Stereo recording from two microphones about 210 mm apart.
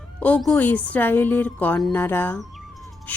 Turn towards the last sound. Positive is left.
turn(degrees=5)  # may be behind; listen again after turning